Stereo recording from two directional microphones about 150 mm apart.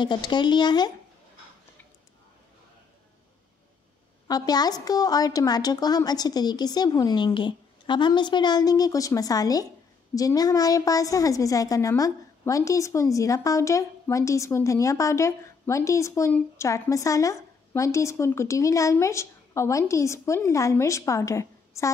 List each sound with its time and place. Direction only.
0.0 s a woman's voice: 30° left (ahead or behind)
4.3 s a woman's voice: 25° left (ahead or behind)